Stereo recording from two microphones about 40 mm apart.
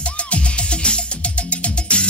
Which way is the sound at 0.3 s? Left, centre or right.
Left.